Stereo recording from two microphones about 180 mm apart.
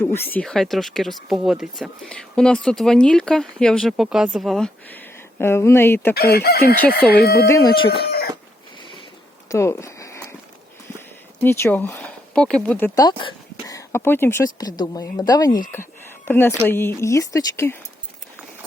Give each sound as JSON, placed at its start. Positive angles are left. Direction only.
{"t": 0.0, "sound": "speech", "side_deg": 10}
{"t": 6.1, "sound": "chicken", "side_deg": 60}
{"t": 7.4, "sound": "a woman's voice", "side_deg": 20}
{"t": 8.0, "sound": "chicken", "side_deg": 60}
{"t": 9.5, "sound": "a sound", "side_deg": 15}
{"t": 11.4, "sound": "speech", "side_deg": 15}
{"t": 13.0, "sound": "a woman's voice", "side_deg": 20}